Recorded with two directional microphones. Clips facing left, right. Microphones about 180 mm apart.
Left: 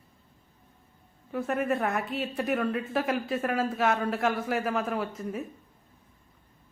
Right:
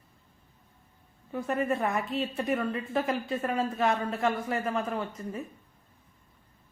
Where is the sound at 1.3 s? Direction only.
Centre (ahead or behind).